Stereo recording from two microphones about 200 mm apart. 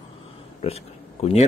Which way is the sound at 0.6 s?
30° left (ahead or behind).